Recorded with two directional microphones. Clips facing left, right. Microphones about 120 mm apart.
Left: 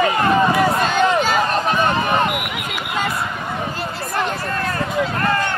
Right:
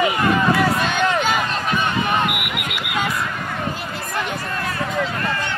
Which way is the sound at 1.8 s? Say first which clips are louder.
Left 3 dB; 35° left (ahead or behind).